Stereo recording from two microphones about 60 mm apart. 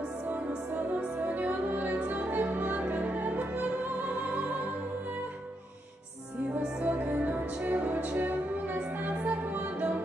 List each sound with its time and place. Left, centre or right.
0.8 s music: right
6.8 s music: right